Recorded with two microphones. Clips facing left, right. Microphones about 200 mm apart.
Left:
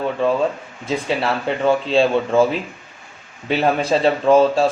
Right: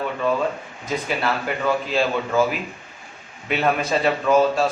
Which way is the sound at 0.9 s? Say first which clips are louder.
Left 3 dB; 30° left (ahead or behind).